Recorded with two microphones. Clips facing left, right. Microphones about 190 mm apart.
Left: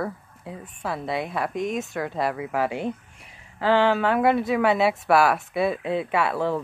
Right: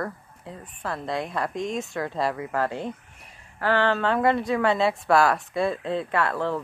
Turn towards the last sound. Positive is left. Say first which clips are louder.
# left 2 dB
turn(degrees=10)  # may be behind; listen again after turning